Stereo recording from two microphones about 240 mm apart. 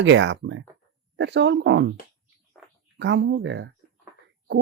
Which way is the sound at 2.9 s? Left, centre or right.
Right.